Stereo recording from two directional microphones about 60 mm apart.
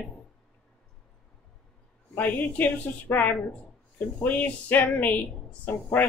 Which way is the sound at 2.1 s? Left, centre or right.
Left.